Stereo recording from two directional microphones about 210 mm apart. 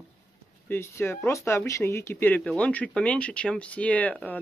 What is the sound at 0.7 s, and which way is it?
Speech, 10° left (ahead or behind).